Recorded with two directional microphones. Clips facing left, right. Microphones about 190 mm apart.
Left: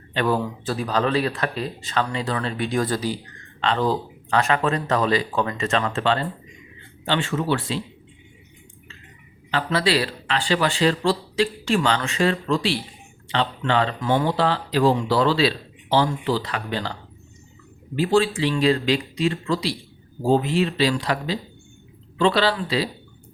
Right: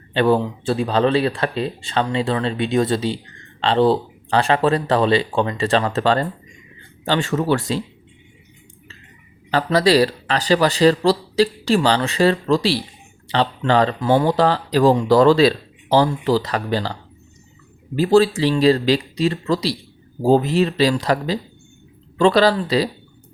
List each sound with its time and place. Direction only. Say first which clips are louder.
0.1 s speech: right 6 dB; 30° right (ahead or behind)
9.5 s speech: right 6 dB; 40° right (ahead or behind)
17.9 s speech: right 5 dB; 40° right (ahead or behind)